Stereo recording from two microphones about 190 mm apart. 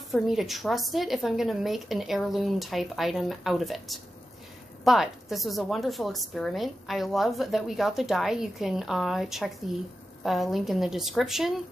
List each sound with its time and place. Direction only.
0.1 s a woman's voice: centre (ahead or behind)